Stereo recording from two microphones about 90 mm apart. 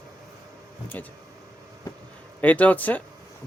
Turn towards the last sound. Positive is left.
turn(degrees=20)  # may be behind; listen again after turning